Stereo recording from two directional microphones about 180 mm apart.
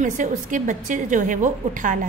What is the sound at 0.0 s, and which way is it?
A woman's voice, 45° right (ahead or behind).